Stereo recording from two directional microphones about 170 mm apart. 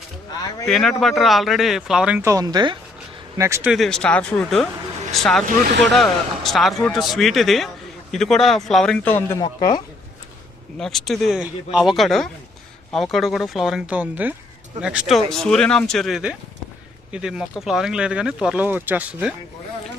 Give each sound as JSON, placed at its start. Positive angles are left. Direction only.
{"t": 0.7, "sound": "speech", "side_deg": 0}
{"t": 3.7, "sound": "speech", "side_deg": 0}
{"t": 9.4, "sound": "a woman's voice", "side_deg": 25}
{"t": 10.8, "sound": "speech", "side_deg": 0}